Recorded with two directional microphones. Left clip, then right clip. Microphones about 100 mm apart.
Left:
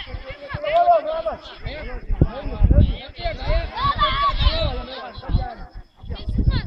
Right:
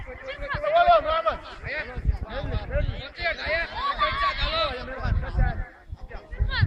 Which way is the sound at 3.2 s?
15° right (ahead or behind).